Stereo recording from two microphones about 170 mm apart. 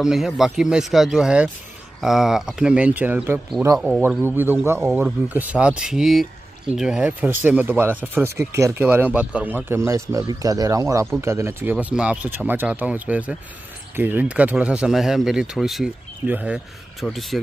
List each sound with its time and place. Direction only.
0.0 s speech: centre (ahead or behind)
4.0 s speech: 15° right (ahead or behind)